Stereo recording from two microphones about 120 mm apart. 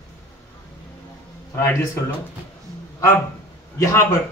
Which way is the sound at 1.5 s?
20° left (ahead or behind).